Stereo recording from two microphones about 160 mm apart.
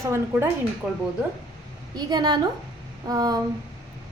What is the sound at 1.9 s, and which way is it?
A woman's voice, 25° right (ahead or behind).